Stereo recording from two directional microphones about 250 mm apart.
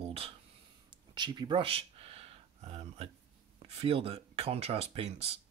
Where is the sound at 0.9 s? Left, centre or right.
Centre.